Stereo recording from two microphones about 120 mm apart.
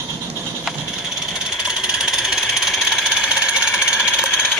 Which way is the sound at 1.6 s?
5° right (ahead or behind).